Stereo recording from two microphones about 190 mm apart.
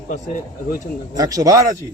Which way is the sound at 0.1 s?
40° left (ahead or behind).